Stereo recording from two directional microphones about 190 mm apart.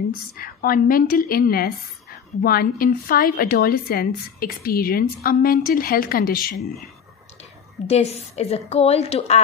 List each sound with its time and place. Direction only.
0.4 s a woman's voice: 50° left (ahead or behind)
7.8 s a woman's voice: 35° left (ahead or behind)